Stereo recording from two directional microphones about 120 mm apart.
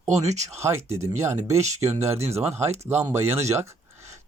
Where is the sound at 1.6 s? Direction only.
70° right (ahead or behind).